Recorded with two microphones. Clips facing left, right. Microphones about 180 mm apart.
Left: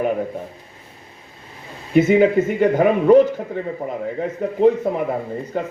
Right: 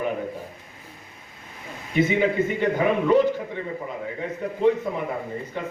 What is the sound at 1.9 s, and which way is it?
Speech, 45° left (ahead or behind).